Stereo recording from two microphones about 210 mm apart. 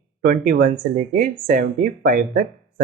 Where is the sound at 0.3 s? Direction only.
40° right (ahead or behind).